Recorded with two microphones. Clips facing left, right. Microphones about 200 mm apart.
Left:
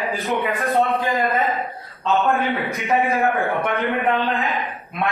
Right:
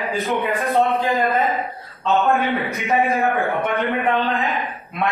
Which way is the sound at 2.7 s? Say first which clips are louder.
Right 1 dB; centre (ahead or behind).